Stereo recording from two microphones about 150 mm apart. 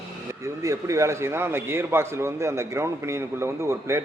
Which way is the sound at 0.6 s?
20° right (ahead or behind).